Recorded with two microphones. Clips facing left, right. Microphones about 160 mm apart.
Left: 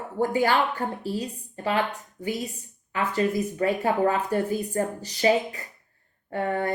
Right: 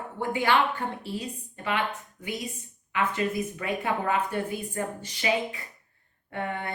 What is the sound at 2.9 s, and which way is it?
A woman's voice, 35° left (ahead or behind).